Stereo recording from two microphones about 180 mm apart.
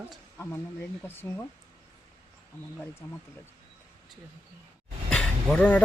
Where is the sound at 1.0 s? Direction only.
10° left (ahead or behind).